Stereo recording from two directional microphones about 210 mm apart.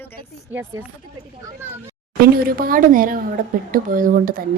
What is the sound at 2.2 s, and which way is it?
Speech, 45° right (ahead or behind).